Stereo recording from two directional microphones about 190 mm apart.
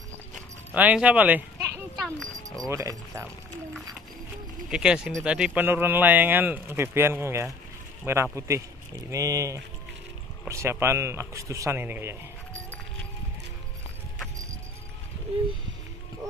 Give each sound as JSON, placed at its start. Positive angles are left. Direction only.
{"t": 0.7, "sound": "speech", "side_deg": -10}
{"t": 2.0, "sound": "dog", "side_deg": 0}
{"t": 2.7, "sound": "speech", "side_deg": -15}
{"t": 4.6, "sound": "speech", "side_deg": -5}